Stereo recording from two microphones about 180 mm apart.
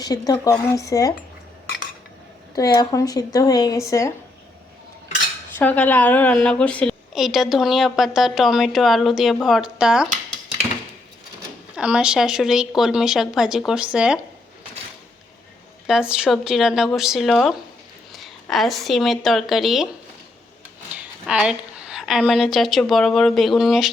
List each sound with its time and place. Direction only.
0.0 s a woman's voice: 20° left (ahead or behind)
2.6 s a woman's voice: 20° left (ahead or behind)
5.5 s a woman's voice: 10° left (ahead or behind)
11.8 s a woman's voice: 5° right (ahead or behind)
15.9 s a woman's voice: 5° right (ahead or behind)
21.2 s a woman's voice: 5° right (ahead or behind)